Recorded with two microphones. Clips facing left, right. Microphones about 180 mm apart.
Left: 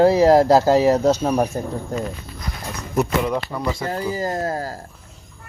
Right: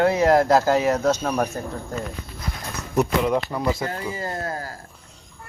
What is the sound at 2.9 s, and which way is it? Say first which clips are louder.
Speech: even; centre (ahead or behind).